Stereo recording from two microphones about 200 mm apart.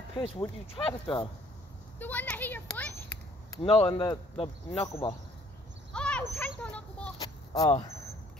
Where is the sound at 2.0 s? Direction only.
10° left (ahead or behind).